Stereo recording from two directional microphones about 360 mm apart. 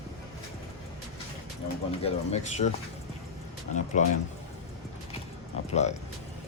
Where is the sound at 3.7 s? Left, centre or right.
Centre.